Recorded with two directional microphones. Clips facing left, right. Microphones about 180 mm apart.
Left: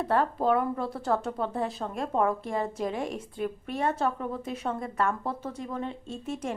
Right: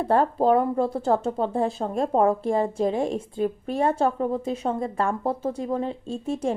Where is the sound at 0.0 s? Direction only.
30° right (ahead or behind).